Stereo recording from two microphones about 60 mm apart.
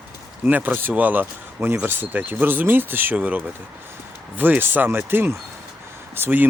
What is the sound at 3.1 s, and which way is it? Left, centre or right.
Speech, right.